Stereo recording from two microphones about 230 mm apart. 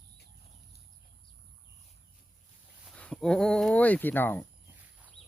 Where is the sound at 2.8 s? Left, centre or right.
Centre.